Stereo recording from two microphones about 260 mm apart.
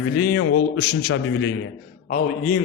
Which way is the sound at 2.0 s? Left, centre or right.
Left.